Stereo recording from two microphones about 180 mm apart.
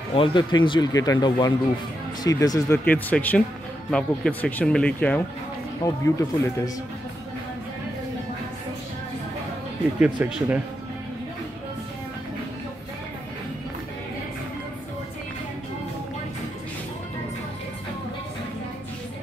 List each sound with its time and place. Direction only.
0.1 s speech: 30° left (ahead or behind)
2.8 s speech: 10° left (ahead or behind)
9.9 s speech: 10° right (ahead or behind)